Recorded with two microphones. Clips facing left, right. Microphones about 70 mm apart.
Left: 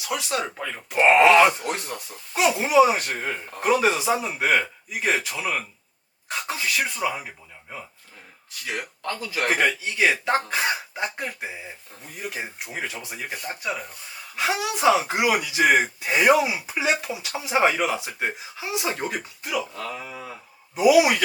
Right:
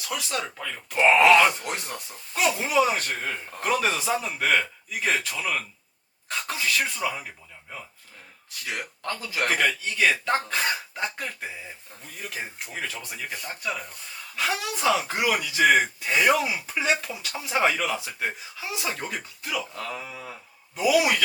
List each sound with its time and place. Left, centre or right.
0.0 s speech: centre
1.9 s speech: centre
9.4 s a man's voice: centre